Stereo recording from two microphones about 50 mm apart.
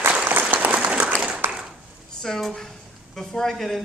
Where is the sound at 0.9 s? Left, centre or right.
Right.